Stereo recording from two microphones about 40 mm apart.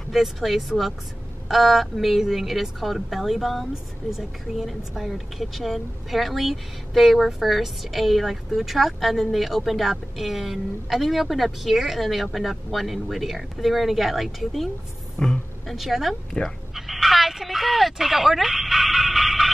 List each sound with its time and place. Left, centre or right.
0.1 s speech: centre
15.1 s speech: left
15.6 s speech: centre
16.7 s a sound: centre